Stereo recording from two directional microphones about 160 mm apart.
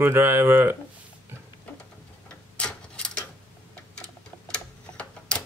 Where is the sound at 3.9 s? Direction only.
5° left (ahead or behind).